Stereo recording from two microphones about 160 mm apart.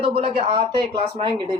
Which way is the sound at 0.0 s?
35° right (ahead or behind).